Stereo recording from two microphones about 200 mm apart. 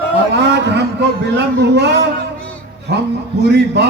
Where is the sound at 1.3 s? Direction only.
60° right (ahead or behind).